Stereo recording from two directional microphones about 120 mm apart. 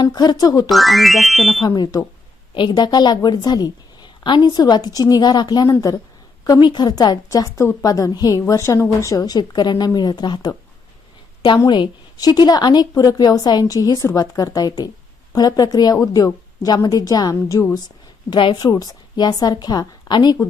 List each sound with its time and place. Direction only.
0.0 s a woman's voice: 35° left (ahead or behind)
0.7 s speech: centre (ahead or behind)
1.6 s a woman's voice: 35° left (ahead or behind)